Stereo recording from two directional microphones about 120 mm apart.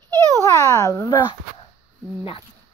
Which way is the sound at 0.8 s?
25° left (ahead or behind).